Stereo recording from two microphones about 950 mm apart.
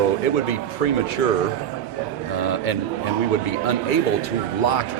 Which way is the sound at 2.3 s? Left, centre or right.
Left.